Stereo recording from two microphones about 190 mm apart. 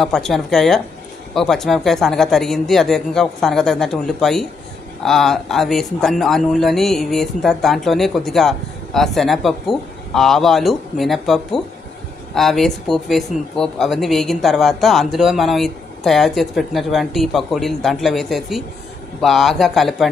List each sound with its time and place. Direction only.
0.0 s speech: centre (ahead or behind)